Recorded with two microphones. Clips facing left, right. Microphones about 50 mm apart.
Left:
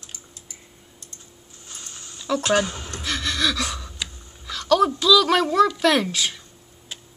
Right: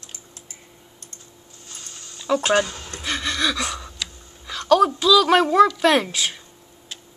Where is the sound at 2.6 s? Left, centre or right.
Left.